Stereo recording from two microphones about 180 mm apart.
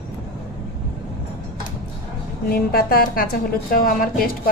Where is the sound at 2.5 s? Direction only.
55° left (ahead or behind).